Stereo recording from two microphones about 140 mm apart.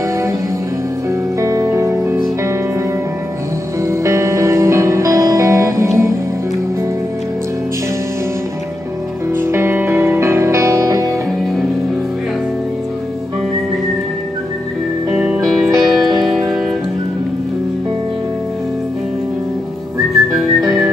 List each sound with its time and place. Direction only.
1.4 s music: 20° right (ahead or behind)
3.8 s music: 20° right (ahead or behind)
9.3 s music: 15° right (ahead or behind)
15.1 s music: 5° right (ahead or behind)